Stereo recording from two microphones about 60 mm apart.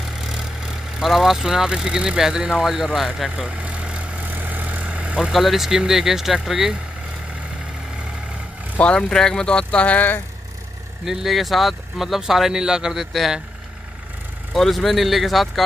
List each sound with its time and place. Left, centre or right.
0.0 s speech: centre
3.3 s vehicle: centre
5.3 s speech: centre
8.7 s speech: centre
11.1 s speech: centre
14.5 s speech: centre